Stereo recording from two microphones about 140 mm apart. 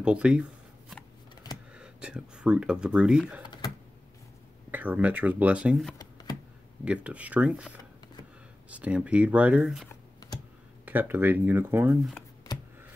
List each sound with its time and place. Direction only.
0.0 s a sound: 5° right (ahead or behind)
1.7 s speech: 5° right (ahead or behind)
4.6 s speech: 10° right (ahead or behind)
9.8 s computer keyboard: 30° left (ahead or behind)
10.9 s speech: 15° right (ahead or behind)